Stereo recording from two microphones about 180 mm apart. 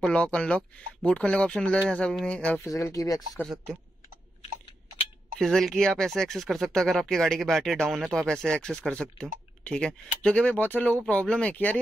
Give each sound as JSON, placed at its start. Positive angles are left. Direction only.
{"t": 0.0, "sound": "speech", "side_deg": 5}
{"t": 2.6, "sound": "speech", "side_deg": 20}
{"t": 3.3, "sound": "speech", "side_deg": 5}
{"t": 5.4, "sound": "speech", "side_deg": 0}